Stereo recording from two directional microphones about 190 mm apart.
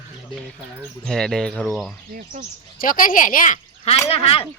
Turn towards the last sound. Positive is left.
turn(degrees=30)  # may be behind; listen again after turning